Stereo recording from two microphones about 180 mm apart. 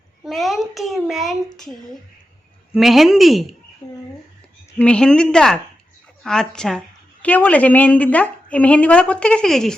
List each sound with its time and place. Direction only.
0.3 s a child's voice: centre (ahead or behind)
3.8 s a sound: 25° left (ahead or behind)
4.8 s a child's voice: 5° left (ahead or behind)